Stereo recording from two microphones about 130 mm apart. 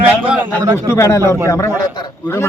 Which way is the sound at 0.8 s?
20° left (ahead or behind).